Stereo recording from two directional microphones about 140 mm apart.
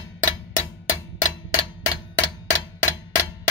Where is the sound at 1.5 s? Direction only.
25° left (ahead or behind).